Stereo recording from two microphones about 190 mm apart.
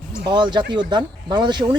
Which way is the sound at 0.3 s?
25° right (ahead or behind).